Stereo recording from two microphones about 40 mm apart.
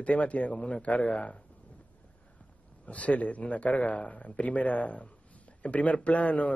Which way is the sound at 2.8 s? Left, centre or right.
Left.